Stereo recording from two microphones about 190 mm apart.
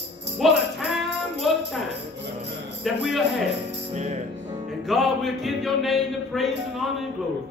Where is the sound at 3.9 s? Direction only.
35° right (ahead or behind).